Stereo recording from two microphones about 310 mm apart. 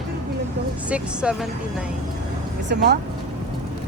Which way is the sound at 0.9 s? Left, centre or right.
Centre.